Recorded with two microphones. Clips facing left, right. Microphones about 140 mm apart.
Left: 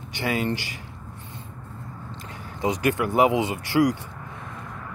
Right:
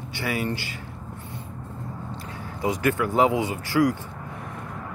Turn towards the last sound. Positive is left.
turn(degrees=20)  # may be behind; listen again after turning